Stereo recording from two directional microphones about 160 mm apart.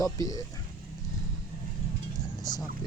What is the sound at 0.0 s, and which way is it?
Speech, 20° left (ahead or behind).